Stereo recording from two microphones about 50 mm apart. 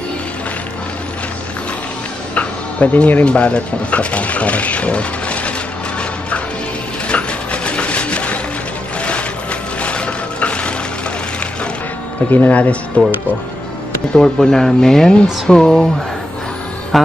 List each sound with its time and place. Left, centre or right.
2.3 s music: left
3.3 s speech: left
7.1 s printer: left
9.0 s mechanisms: left
12.3 s speech: left
12.5 s speech: left
14.1 s speech: centre
16.9 s speech: centre